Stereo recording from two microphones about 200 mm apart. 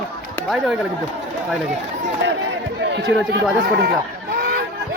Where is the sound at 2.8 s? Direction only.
60° right (ahead or behind).